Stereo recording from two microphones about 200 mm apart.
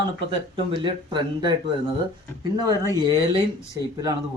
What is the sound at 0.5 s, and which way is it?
Speech, 25° right (ahead or behind).